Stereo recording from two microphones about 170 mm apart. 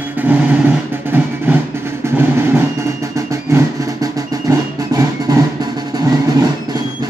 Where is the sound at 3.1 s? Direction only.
20° right (ahead or behind).